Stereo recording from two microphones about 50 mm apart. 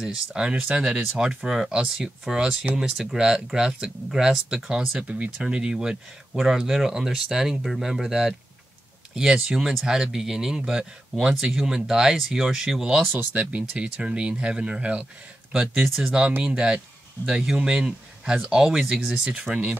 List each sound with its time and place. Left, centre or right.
0.0 s speech: centre
1.2 s speech: centre
5.0 s speech: right
6.3 s speech: centre
13.1 s speech: right
15.5 s speech: centre